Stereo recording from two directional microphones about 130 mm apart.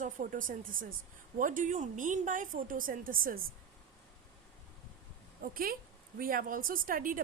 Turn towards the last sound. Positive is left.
turn(degrees=-90)